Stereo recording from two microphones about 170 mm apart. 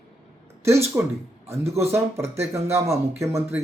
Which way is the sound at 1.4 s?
35° right (ahead or behind).